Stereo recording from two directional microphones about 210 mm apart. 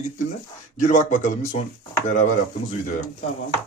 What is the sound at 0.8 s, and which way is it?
Speech, 35° left (ahead or behind).